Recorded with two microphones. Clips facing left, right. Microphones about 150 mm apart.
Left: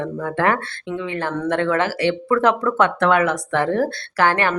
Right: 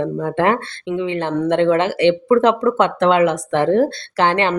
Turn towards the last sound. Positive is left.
turn(degrees=-20)  # may be behind; listen again after turning